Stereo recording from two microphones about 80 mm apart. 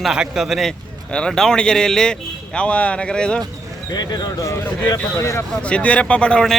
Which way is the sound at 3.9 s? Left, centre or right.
Left.